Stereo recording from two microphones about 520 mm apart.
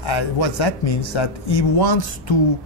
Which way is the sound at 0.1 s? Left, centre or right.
Left.